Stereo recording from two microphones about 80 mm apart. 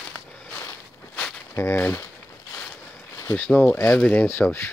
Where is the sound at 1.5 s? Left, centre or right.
Left.